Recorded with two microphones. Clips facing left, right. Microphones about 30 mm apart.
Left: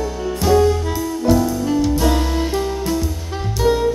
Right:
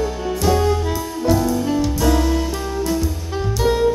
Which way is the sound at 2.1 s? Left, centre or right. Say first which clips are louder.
Right 2 dB; centre.